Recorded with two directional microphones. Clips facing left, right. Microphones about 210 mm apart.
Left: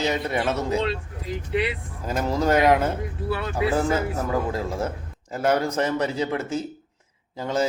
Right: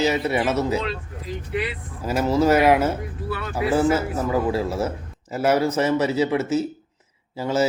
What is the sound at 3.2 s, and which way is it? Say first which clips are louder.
Speech: left 3 dB; 25° left (ahead or behind).